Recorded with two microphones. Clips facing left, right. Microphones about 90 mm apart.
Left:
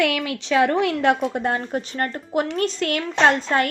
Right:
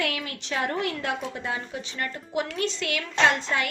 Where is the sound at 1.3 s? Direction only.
55° left (ahead or behind).